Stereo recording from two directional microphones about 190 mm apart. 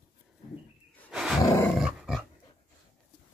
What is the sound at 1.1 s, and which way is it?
Roar, 5° right (ahead or behind).